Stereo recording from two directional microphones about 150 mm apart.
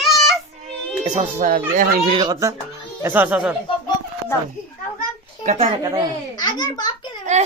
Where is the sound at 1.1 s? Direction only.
55° right (ahead or behind).